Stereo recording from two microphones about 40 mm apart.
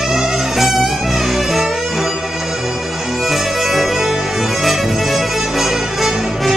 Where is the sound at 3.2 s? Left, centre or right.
Centre.